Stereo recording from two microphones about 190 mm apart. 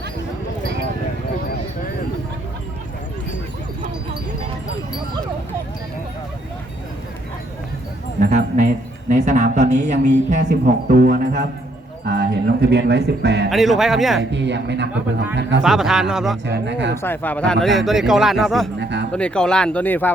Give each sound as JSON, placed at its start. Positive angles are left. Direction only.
{"t": 8.2, "sound": "a sound", "side_deg": -40}
{"t": 10.4, "sound": "speech", "side_deg": -55}
{"t": 13.5, "sound": "speech", "side_deg": 0}
{"t": 14.2, "sound": "speech", "side_deg": -70}
{"t": 15.6, "sound": "speech", "side_deg": 0}
{"t": 16.5, "sound": "speech", "side_deg": -70}
{"t": 16.9, "sound": "speech", "side_deg": 10}
{"t": 18.8, "sound": "music", "side_deg": -65}
{"t": 19.1, "sound": "speech", "side_deg": 5}